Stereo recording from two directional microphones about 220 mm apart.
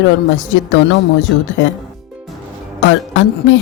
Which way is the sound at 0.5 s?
60° left (ahead or behind).